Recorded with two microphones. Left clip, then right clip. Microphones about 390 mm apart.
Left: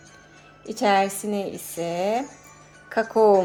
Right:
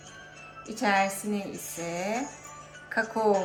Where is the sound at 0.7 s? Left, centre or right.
Centre.